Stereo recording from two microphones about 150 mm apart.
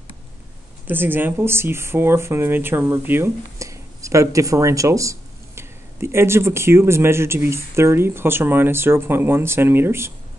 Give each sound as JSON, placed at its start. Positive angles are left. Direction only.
{"t": 0.8, "sound": "speech", "side_deg": -15}